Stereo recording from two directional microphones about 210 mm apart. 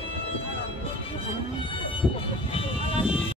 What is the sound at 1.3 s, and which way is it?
Music, 25° left (ahead or behind).